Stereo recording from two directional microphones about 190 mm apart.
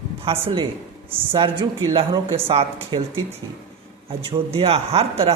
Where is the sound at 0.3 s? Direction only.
25° right (ahead or behind).